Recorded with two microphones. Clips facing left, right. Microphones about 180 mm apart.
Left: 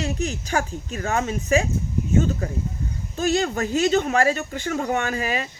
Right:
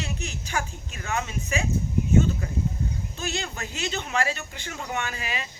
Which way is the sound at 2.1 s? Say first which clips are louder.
Left 1 dB; 45° left (ahead or behind).